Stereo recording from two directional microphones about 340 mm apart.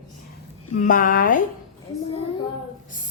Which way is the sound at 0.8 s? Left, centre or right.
Left.